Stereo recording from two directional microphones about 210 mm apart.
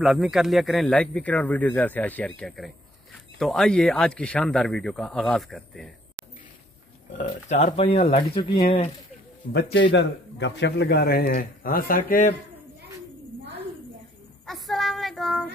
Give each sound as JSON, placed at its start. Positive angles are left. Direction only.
{"t": 0.0, "sound": "speech", "side_deg": 0}
{"t": 7.4, "sound": "speech", "side_deg": 30}
{"t": 9.5, "sound": "a man's voice", "side_deg": 55}
{"t": 14.4, "sound": "child singing", "side_deg": 0}